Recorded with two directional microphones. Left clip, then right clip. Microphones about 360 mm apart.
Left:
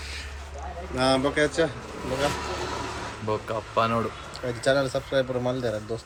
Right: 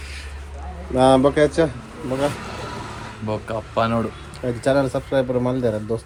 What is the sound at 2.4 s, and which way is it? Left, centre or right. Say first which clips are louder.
Vehicle: left 1 dB; left.